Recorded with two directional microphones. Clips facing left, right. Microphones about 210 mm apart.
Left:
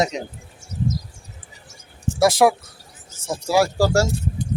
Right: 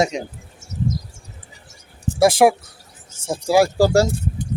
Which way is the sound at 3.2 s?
30° right (ahead or behind).